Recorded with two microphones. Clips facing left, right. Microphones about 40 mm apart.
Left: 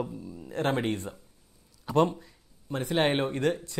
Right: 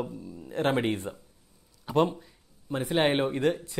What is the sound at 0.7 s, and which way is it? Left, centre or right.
A man's voice, centre.